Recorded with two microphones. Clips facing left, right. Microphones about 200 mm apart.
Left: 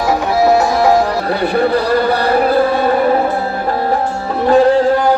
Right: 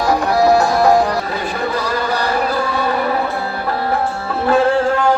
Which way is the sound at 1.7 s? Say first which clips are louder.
Left 7 dB; 60° left (ahead or behind).